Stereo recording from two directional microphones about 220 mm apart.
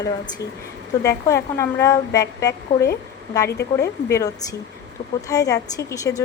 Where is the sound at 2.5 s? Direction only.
50° left (ahead or behind).